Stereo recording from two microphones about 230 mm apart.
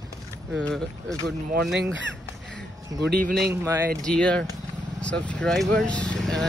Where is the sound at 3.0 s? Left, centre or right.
Right.